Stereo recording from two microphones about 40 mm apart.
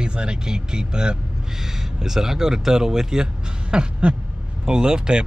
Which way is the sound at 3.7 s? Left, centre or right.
Right.